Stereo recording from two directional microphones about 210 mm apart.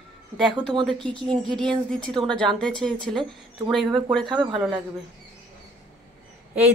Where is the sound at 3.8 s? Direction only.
20° right (ahead or behind).